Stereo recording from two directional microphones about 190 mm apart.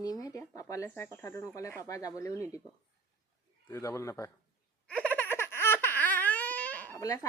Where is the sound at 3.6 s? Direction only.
15° left (ahead or behind).